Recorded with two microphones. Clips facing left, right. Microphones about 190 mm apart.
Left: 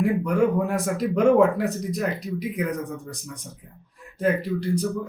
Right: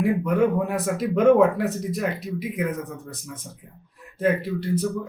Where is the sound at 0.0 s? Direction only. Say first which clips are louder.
Even; 5° right (ahead or behind).